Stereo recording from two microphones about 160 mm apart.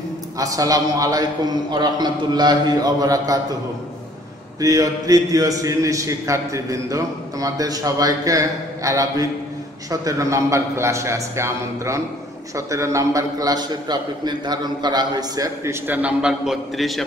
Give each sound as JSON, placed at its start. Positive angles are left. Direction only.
{"t": 0.4, "sound": "a man's voice", "side_deg": -20}
{"t": 4.6, "sound": "a man's voice", "side_deg": -20}